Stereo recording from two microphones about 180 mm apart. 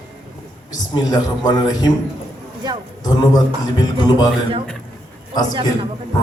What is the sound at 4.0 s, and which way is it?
Speech, 20° left (ahead or behind).